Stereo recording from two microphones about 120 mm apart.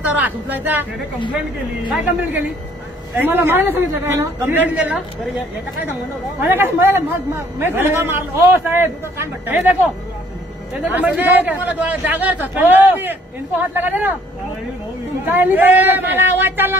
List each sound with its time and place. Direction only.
0.0 s speech: 15° right (ahead or behind)
1.9 s speech: 15° right (ahead or behind)
6.4 s a man's voice: 20° right (ahead or behind)
15.2 s speech: 15° right (ahead or behind)